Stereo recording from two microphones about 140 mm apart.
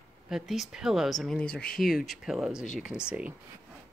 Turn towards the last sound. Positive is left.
turn(degrees=-5)  # may be behind; listen again after turning